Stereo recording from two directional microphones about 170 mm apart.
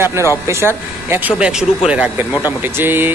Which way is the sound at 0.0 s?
15° right (ahead or behind).